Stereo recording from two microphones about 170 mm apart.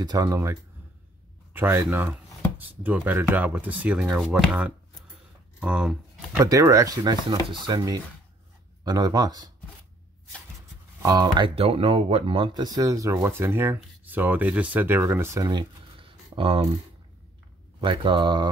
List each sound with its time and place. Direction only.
0.0 s speech: 20° right (ahead or behind); by 5.9 s 5° right (ahead or behind)
6.3 s speech: 20° right (ahead or behind)
11.0 s speech: 20° right (ahead or behind)
17.7 s speech: 30° right (ahead or behind)